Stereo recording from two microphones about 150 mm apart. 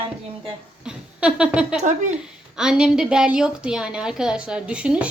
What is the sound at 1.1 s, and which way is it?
A woman's voice, 5° right (ahead or behind).